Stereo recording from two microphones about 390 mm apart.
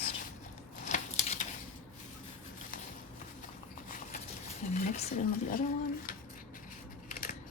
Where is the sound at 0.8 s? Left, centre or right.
Centre.